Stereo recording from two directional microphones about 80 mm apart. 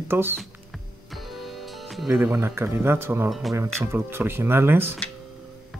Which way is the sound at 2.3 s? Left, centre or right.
Right.